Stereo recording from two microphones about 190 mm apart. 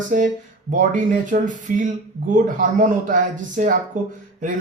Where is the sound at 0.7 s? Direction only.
45° right (ahead or behind).